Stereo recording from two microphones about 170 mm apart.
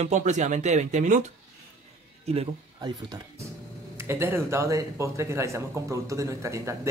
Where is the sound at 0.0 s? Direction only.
40° right (ahead or behind).